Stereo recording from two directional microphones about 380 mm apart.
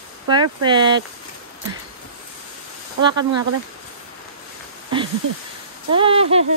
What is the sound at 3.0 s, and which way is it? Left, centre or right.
Speech, centre.